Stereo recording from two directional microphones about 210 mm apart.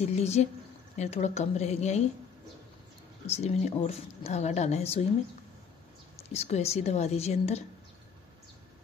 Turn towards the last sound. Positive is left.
turn(degrees=30)  # may be behind; listen again after turning